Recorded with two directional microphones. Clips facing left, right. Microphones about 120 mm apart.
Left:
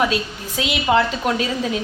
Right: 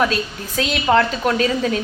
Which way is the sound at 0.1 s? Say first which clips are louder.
Even; 15° left (ahead or behind).